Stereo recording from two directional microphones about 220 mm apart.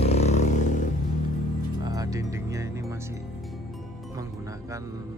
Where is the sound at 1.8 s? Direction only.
15° right (ahead or behind).